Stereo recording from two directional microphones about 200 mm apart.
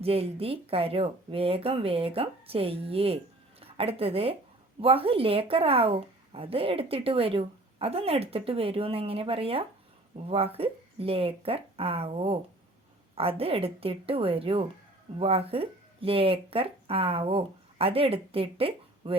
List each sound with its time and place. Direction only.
0.0 s speech: 30° right (ahead or behind)